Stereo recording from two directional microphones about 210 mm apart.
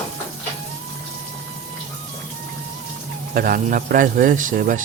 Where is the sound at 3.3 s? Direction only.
45° right (ahead or behind).